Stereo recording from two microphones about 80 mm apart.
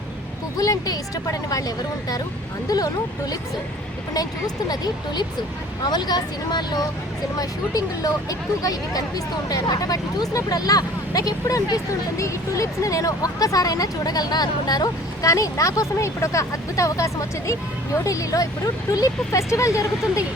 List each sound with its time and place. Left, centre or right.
0.5 s speech: left
7.3 s speech: left